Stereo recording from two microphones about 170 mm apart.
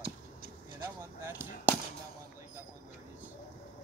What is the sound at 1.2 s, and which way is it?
Speech, 15° right (ahead or behind).